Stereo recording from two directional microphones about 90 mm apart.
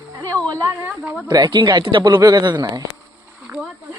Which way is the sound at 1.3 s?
45° right (ahead or behind).